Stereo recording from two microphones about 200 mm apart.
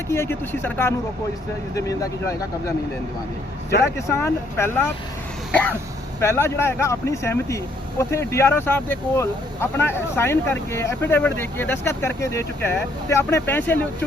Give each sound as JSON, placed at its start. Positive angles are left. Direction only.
{"t": 0.1, "sound": "speech", "side_deg": 10}
{"t": 3.9, "sound": "speech", "side_deg": 15}
{"t": 5.5, "sound": "throat clearing", "side_deg": 5}
{"t": 6.1, "sound": "speech", "side_deg": 10}